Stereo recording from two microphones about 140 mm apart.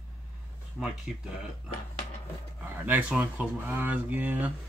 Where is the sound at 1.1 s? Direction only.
Centre (ahead or behind).